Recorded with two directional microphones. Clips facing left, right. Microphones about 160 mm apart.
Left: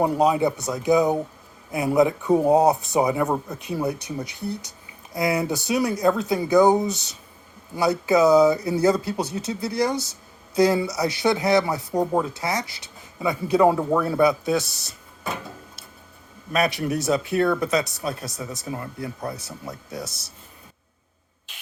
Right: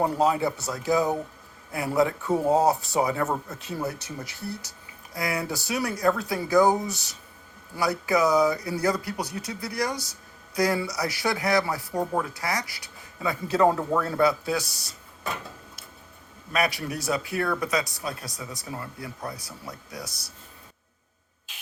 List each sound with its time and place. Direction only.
0.0 s speech: 15° left (ahead or behind)
16.5 s speech: 25° left (ahead or behind)